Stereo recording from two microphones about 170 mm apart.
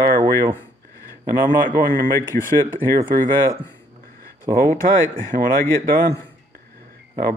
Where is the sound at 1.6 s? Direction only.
55° right (ahead or behind).